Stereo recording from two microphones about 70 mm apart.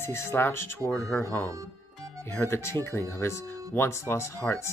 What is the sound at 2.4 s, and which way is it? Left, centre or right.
Speech, left.